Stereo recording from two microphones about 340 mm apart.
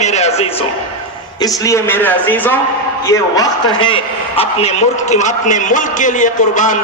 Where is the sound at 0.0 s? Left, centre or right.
Centre.